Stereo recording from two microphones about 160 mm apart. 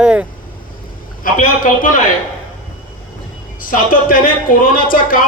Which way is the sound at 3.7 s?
60° left (ahead or behind).